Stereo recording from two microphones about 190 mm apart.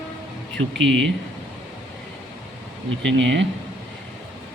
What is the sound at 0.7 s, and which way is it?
Speech, 5° left (ahead or behind).